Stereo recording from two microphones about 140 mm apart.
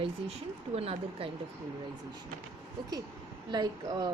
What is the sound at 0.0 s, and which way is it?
Speech, 45° right (ahead or behind).